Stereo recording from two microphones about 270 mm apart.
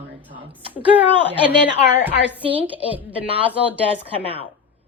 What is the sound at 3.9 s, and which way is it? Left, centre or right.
Speech, right.